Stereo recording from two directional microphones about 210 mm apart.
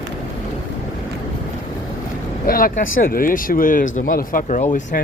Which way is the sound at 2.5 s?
45° left (ahead or behind).